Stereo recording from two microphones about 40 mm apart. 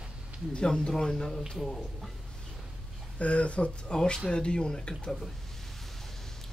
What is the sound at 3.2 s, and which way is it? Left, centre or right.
Speech, left.